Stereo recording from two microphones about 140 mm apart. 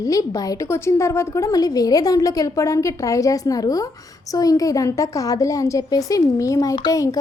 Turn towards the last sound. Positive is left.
turn(degrees=25)  # may be behind; listen again after turning